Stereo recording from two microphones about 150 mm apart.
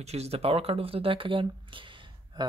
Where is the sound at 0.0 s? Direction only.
45° right (ahead or behind).